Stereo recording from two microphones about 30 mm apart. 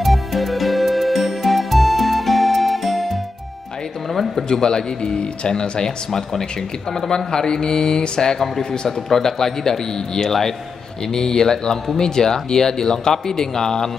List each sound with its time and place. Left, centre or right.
0.0 s music: centre
4.1 s a sound: centre
4.5 s speech: left
5.1 s speech: left
8.8 s speech: centre